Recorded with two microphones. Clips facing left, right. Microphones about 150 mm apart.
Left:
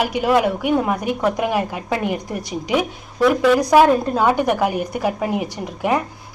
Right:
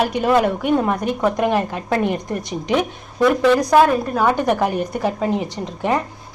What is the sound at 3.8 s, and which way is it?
A woman's voice, 20° left (ahead or behind).